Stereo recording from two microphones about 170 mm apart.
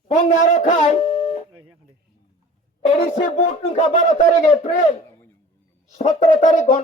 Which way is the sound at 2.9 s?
40° left (ahead or behind).